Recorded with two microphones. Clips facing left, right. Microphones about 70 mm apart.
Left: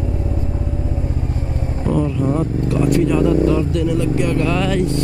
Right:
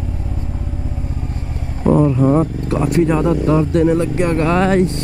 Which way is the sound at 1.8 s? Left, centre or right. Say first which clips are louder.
Right 6 dB; right.